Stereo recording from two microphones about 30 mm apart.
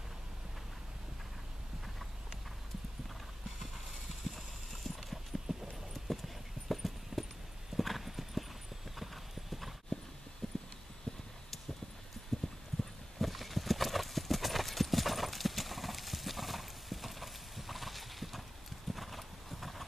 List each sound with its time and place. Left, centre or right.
4.8 s clip-clop: centre
5.7 s a sound: centre
7.7 s clip-clop: centre
10.4 s clip-clop: centre
11.1 s vehicle: left
13.2 s clip-clop: centre